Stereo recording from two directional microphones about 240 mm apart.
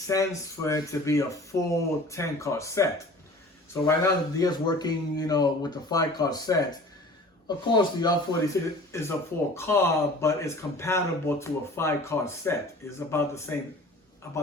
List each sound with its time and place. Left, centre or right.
0.1 s a man's voice: centre